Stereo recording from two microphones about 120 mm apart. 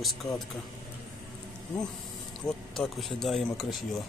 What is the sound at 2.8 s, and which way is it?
Speech, 5° left (ahead or behind).